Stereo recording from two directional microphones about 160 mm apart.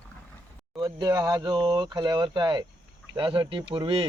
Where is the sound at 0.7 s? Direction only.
25° right (ahead or behind).